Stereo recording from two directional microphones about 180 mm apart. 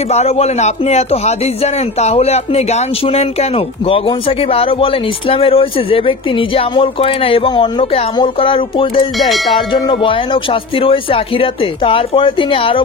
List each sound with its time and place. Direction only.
0.1 s speech: 35° left (ahead or behind)
9.2 s music: centre (ahead or behind)
9.7 s speech: 30° left (ahead or behind)